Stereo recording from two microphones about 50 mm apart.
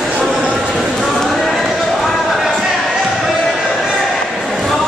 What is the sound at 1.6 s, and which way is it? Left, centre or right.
Basketball bounce, centre.